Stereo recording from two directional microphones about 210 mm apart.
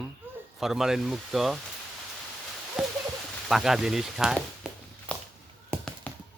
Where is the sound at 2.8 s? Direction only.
5° right (ahead or behind).